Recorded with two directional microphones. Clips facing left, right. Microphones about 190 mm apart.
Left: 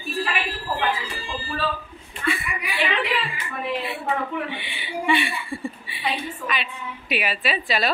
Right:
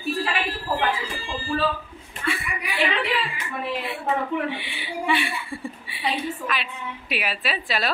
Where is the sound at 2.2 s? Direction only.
30° right (ahead or behind).